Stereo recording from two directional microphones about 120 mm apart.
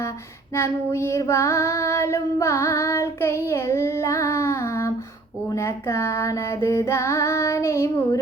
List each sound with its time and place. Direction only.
0.5 s child singing: 20° left (ahead or behind)